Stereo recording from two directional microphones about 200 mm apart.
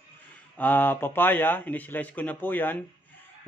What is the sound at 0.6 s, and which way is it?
Speech, 10° left (ahead or behind).